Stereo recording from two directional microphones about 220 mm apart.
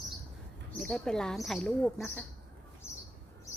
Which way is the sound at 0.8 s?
5° left (ahead or behind).